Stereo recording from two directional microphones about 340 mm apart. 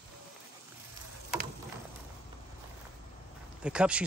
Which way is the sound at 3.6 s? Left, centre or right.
Centre.